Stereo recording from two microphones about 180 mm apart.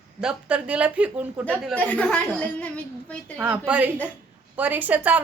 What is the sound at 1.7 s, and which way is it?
A woman's voice, 10° left (ahead or behind).